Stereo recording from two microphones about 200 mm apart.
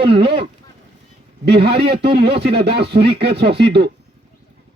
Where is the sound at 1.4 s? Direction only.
55° right (ahead or behind).